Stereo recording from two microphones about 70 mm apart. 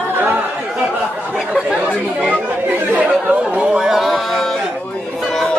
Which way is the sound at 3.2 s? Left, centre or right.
Centre.